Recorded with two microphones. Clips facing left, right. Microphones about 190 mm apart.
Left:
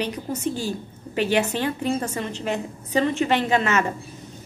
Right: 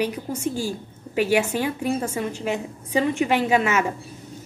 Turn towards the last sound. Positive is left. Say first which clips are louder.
# right 1 dB
turn(degrees=-10)  # may be behind; listen again after turning